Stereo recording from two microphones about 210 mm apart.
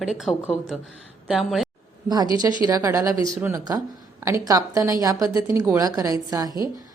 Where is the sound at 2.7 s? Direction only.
15° right (ahead or behind).